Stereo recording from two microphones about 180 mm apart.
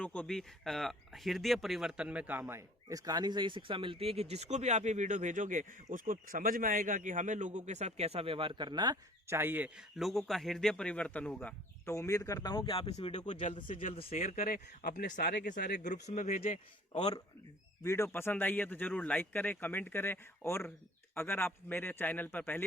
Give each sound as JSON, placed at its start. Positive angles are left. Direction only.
{"t": 0.0, "sound": "speech", "side_deg": 5}
{"t": 13.6, "sound": "speech", "side_deg": 30}
{"t": 14.1, "sound": "speech", "side_deg": 45}
{"t": 17.8, "sound": "speech", "side_deg": 15}